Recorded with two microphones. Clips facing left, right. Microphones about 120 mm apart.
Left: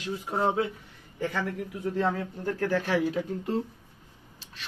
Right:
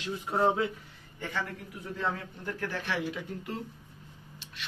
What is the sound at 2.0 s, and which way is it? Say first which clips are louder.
A man's voice: left 3 dB; 35° left (ahead or behind).